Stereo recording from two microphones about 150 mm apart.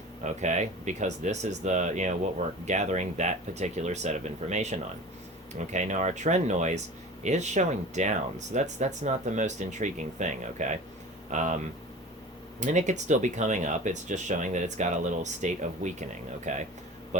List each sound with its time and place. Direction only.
0.3 s speech: 50° right (ahead or behind)
12.5 s speech: 55° right (ahead or behind)